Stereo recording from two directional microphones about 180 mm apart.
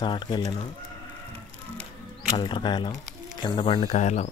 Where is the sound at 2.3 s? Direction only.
25° left (ahead or behind).